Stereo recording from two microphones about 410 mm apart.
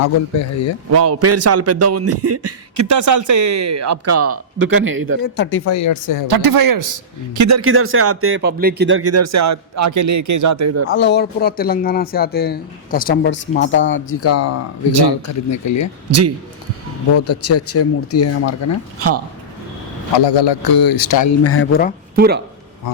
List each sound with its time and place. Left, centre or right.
0.0 s speech: left
0.9 s speech: right
5.2 s speech: left
6.2 s speech: right
10.8 s speech: left
17.2 s speech: left
18.9 s speech: right
20.1 s a man's voice: left
21.4 s speech: left
22.1 s speech: right